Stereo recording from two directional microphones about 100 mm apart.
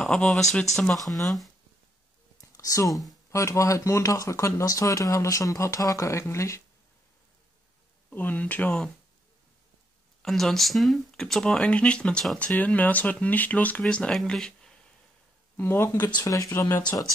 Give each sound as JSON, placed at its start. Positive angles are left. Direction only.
{"t": 0.0, "sound": "speech", "side_deg": 10}
{"t": 2.4, "sound": "a sound", "side_deg": 35}
{"t": 3.3, "sound": "speech", "side_deg": 30}
{"t": 8.1, "sound": "speech", "side_deg": 15}
{"t": 10.2, "sound": "speech", "side_deg": 5}
{"t": 15.5, "sound": "speech", "side_deg": 20}